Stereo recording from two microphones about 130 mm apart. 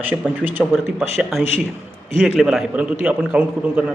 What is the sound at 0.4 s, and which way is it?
Speech, 15° right (ahead or behind).